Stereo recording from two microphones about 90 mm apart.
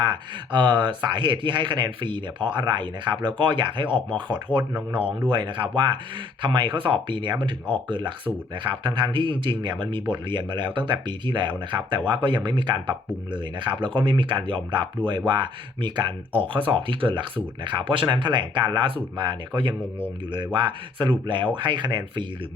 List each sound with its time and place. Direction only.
0.5 s speech: 55° right (ahead or behind)
4.3 s speech: 20° right (ahead or behind)
5.3 s speech: 65° right (ahead or behind)